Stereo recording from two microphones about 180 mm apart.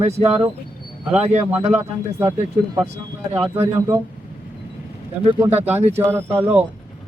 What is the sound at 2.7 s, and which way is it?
Speech, 15° right (ahead or behind).